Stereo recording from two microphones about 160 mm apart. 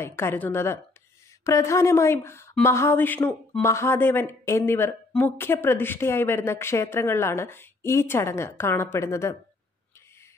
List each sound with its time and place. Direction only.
0.0 s speech: 15° left (ahead or behind)